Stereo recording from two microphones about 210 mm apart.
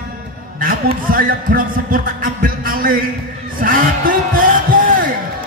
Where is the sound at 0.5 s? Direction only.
45° right (ahead or behind).